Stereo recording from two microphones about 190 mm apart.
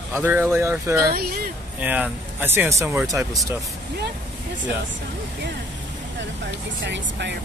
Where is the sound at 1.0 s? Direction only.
55° right (ahead or behind).